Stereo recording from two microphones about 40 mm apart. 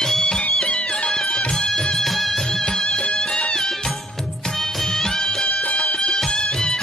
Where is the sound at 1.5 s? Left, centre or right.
Centre.